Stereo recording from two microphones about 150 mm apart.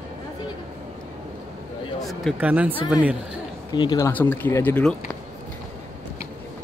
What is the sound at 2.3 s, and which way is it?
Speech, 10° right (ahead or behind).